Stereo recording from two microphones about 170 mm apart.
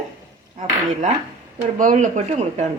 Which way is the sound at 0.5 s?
45° right (ahead or behind).